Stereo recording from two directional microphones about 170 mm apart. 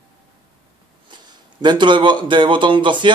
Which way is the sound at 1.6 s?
25° right (ahead or behind).